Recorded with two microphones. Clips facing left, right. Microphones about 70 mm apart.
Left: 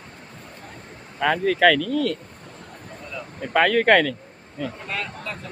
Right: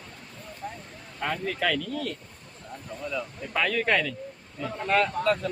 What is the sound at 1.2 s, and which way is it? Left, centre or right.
Speech, left.